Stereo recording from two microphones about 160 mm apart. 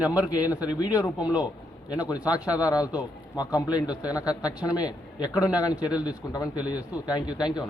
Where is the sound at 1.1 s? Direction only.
10° right (ahead or behind).